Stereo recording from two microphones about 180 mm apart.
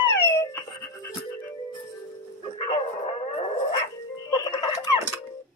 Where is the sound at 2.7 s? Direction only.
35° left (ahead or behind).